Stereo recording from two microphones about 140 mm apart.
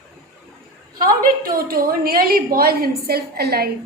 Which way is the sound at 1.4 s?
90° right.